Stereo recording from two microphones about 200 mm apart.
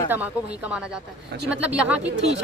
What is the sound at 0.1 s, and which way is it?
A woman's voice, 5° right (ahead or behind).